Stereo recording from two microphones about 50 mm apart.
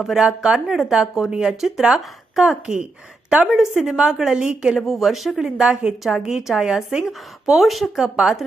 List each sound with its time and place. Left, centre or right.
0.2 s speech: centre
3.4 s speech: centre
3.9 s a woman's voice: centre
4.7 s speech: centre
5.6 s a woman's voice: right; by 8.1 s centre